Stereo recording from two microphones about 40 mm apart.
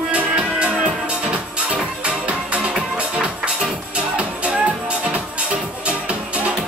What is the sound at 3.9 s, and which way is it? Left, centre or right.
Music, right.